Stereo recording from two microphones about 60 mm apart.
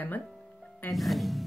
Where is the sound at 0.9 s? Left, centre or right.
Centre.